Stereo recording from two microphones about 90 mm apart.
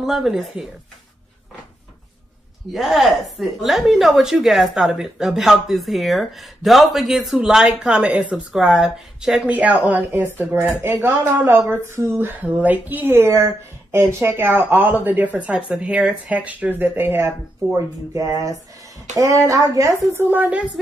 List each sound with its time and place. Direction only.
0.0 s speech: 5° right (ahead or behind)
2.7 s speech: centre (ahead or behind); by 17.3 s 25° right (ahead or behind)
17.7 s speech: 40° right (ahead or behind)
20.2 s speech: 20° right (ahead or behind)